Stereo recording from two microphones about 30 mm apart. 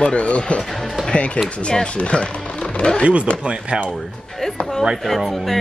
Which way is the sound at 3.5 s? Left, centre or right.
Right.